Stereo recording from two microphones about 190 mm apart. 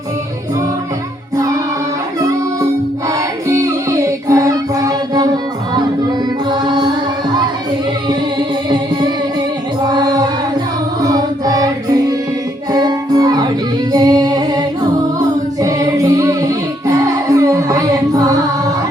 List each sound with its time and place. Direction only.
3.1 s music: 15° right (ahead or behind)
6.5 s music: 25° right (ahead or behind)
9.9 s music: 20° right (ahead or behind)
15.6 s music: 15° right (ahead or behind)